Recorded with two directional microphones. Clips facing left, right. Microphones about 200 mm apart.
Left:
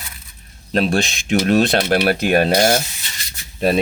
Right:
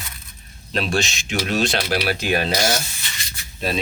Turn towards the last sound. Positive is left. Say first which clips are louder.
# left 8 dB
turn(degrees=55)  # may be behind; listen again after turning